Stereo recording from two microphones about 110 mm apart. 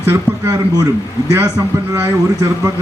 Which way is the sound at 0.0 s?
20° right (ahead or behind).